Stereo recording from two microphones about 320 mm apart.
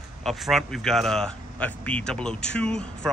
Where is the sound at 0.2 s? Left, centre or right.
Centre.